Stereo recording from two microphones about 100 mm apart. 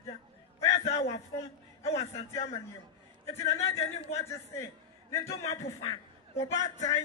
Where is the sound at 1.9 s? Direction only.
90° left.